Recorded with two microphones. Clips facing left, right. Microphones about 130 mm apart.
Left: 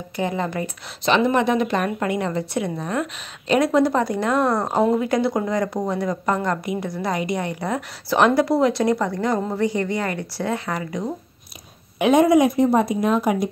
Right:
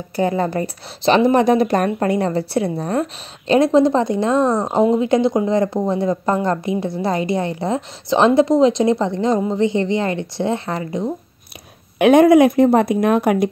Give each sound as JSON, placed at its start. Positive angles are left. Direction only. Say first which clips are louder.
{"t": 0.1, "sound": "a woman's voice", "louder": "right 6 dB", "side_deg": -35}
{"t": 12.0, "sound": "speech", "louder": "right 5 dB", "side_deg": -60}